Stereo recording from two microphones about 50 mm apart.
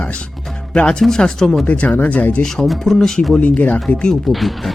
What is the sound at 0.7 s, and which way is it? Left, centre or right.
Speech, centre.